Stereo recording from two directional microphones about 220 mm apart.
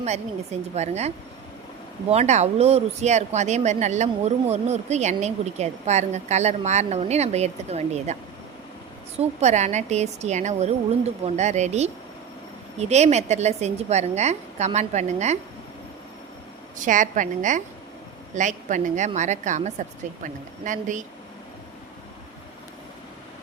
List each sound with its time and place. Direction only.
0.0 s speech: 30° right (ahead or behind)
9.1 s speech: 30° right (ahead or behind)
16.7 s speech: 35° right (ahead or behind)